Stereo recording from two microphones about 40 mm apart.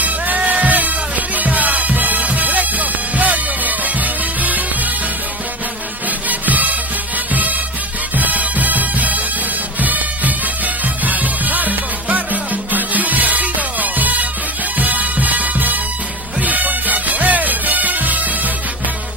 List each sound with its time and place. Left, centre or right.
0.5 s music: right
6.2 s music: right
8.2 s music: right